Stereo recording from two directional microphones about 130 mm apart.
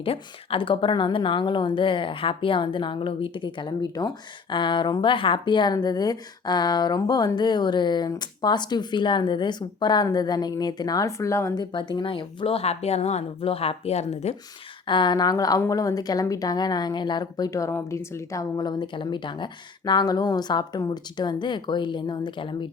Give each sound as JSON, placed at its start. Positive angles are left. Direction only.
{"t": 0.0, "sound": "a woman's voice", "side_deg": 45}
{"t": 11.6, "sound": "speech", "side_deg": 40}
{"t": 14.8, "sound": "a woman's voice", "side_deg": 35}